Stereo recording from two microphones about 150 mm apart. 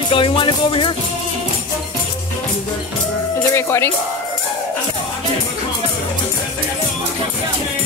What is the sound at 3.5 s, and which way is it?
Speech, 15° left (ahead or behind).